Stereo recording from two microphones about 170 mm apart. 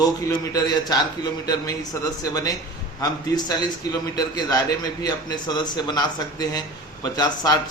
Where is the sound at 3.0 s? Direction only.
20° left (ahead or behind).